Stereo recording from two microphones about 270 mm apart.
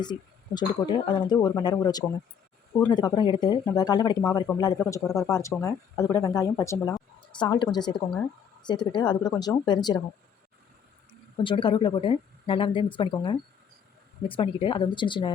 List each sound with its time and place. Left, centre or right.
0.0 s speech: centre
11.3 s speech: centre